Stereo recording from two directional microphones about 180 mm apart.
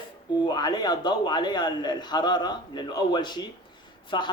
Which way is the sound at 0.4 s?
25° left (ahead or behind).